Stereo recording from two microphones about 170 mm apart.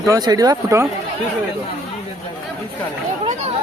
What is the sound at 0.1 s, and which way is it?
Speech, 20° right (ahead or behind).